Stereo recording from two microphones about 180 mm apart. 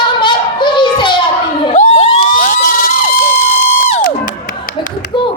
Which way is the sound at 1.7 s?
40° left (ahead or behind).